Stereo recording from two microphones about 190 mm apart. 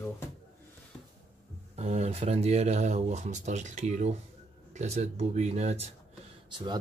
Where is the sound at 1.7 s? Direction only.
35° right (ahead or behind).